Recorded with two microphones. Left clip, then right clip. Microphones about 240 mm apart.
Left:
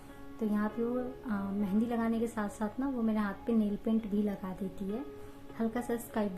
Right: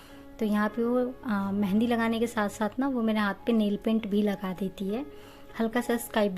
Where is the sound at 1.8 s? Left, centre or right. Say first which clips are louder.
Right 9 dB; right.